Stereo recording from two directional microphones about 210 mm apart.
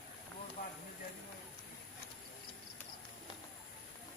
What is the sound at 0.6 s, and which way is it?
Clip-clop, 35° left (ahead or behind).